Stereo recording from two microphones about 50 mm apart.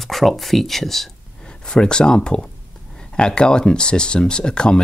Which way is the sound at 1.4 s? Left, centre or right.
Centre.